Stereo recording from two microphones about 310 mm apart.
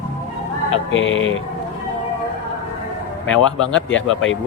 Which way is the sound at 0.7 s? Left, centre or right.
Left.